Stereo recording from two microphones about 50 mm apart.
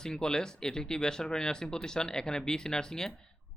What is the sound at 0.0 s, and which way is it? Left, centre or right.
Speech, centre.